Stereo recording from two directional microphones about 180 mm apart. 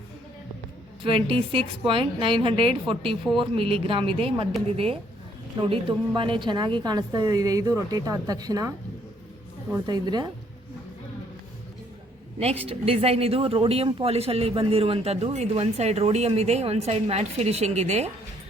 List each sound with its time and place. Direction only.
1.0 s a woman's voice: 30° right (ahead or behind)
5.5 s a woman's voice: 30° right (ahead or behind)
9.7 s a woman's voice: 25° right (ahead or behind)
12.4 s speech: 35° right (ahead or behind)